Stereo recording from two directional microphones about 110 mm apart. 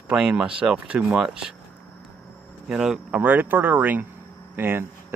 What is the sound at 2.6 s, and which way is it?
Speech, 5° right (ahead or behind).